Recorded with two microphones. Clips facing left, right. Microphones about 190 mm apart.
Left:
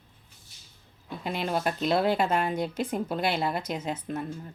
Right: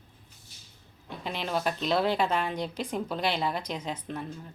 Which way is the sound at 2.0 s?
45° left (ahead or behind).